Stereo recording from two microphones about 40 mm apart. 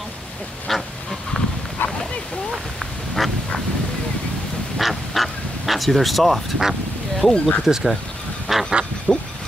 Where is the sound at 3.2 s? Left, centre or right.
Centre.